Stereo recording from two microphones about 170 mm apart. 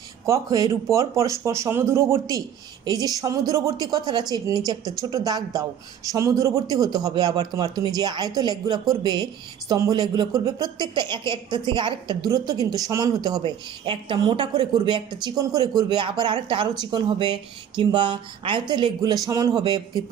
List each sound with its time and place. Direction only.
0.3 s speech: 20° right (ahead or behind)